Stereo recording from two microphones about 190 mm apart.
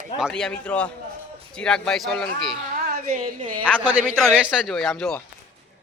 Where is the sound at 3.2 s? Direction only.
25° right (ahead or behind).